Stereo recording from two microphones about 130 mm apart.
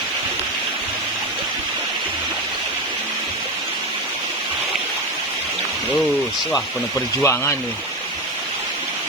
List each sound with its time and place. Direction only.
7.2 s speech: 20° left (ahead or behind)